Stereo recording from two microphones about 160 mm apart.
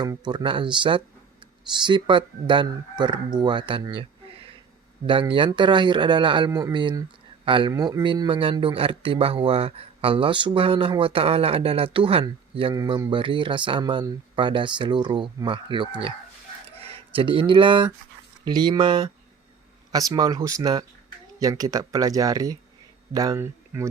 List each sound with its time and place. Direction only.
0.0 s speech: 25° right (ahead or behind)
7.7 s speech: 20° right (ahead or behind)
16.6 s a sound: 40° right (ahead or behind)
18.4 s speech: 25° right (ahead or behind)